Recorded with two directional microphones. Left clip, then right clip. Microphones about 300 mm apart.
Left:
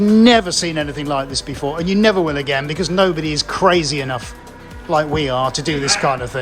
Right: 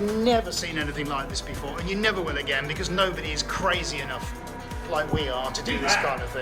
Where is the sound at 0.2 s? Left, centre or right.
Left.